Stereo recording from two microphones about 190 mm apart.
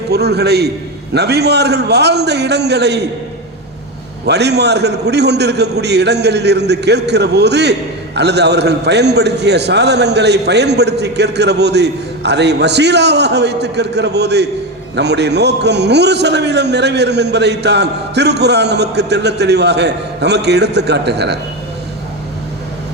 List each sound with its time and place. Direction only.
0.1 s a man's voice: 60° right (ahead or behind)
4.3 s a man's voice: 60° right (ahead or behind)